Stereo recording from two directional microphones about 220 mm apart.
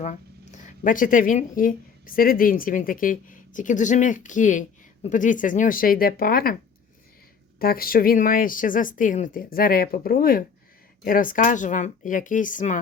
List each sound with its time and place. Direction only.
0.0 s speech: 35° left (ahead or behind)
7.6 s speech: 40° left (ahead or behind)